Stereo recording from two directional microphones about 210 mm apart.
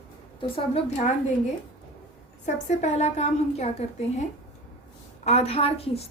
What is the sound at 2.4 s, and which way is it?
A woman's voice, 35° left (ahead or behind).